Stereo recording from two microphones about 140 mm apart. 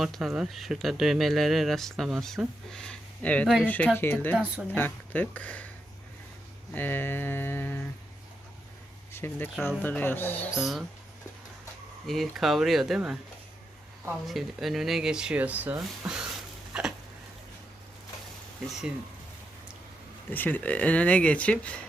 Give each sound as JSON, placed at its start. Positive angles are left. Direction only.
{"t": 0.0, "sound": "speech", "side_deg": 0}
{"t": 6.7, "sound": "speech", "side_deg": 15}
{"t": 9.1, "sound": "speech", "side_deg": 15}
{"t": 10.5, "sound": "speech", "side_deg": 0}
{"t": 12.0, "sound": "speech", "side_deg": 0}
{"t": 14.3, "sound": "speech", "side_deg": 0}
{"t": 16.7, "sound": "a sound", "side_deg": -5}
{"t": 20.3, "sound": "speech", "side_deg": 10}